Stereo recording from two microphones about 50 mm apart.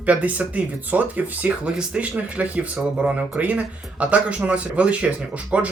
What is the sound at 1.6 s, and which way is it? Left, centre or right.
Speech, centre.